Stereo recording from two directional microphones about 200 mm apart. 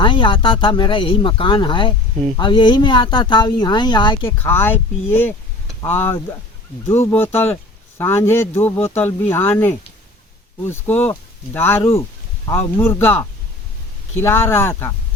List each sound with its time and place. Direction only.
0.0 s speech: 25° left (ahead or behind)
4.3 s speech: 10° left (ahead or behind)
5.8 s speech: 10° left (ahead or behind)